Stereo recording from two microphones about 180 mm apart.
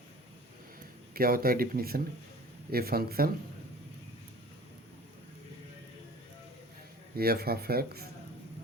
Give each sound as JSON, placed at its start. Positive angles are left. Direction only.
{"t": 1.1, "sound": "speech", "side_deg": -55}
{"t": 7.2, "sound": "speech", "side_deg": -60}